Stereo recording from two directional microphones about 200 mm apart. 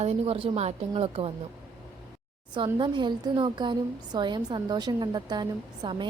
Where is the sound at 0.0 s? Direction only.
30° right (ahead or behind).